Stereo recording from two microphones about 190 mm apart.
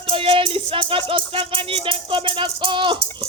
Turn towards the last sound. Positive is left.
turn(degrees=-25)  # may be behind; listen again after turning